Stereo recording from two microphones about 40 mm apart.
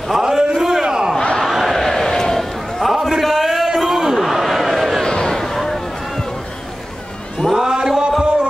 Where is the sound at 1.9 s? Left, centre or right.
Centre.